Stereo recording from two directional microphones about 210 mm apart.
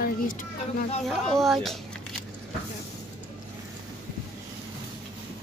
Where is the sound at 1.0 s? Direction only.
Centre (ahead or behind).